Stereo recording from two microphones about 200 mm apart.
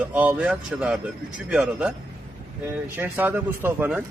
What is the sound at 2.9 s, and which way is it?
A man's voice, 10° right (ahead or behind).